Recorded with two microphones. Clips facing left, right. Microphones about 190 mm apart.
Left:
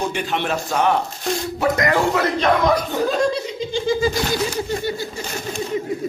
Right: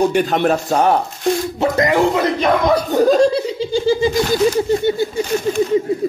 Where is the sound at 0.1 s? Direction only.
40° right (ahead or behind).